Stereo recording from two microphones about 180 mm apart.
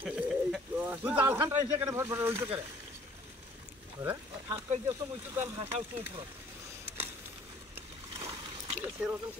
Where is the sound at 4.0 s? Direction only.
15° right (ahead or behind).